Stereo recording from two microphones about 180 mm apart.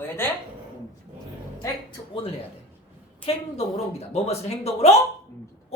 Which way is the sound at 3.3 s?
35° left (ahead or behind).